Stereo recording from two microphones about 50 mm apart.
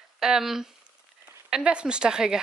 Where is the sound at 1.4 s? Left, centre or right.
Centre.